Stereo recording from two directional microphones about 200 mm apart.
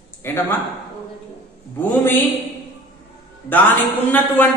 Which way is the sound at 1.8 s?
10° left (ahead or behind).